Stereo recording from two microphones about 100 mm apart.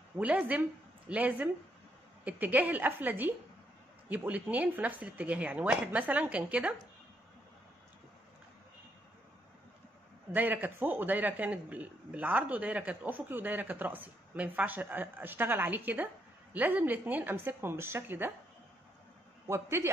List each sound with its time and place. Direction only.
0.2 s a man's voice: 15° right (ahead or behind)
10.3 s a man's voice: 15° right (ahead or behind)
19.4 s a woman's voice: 30° right (ahead or behind)